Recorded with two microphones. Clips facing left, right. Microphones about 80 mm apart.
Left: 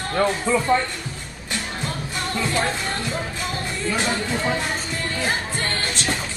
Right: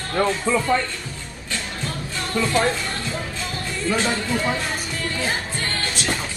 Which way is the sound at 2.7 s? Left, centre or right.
Left.